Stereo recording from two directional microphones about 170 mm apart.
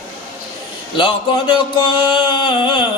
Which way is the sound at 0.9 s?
30° left (ahead or behind).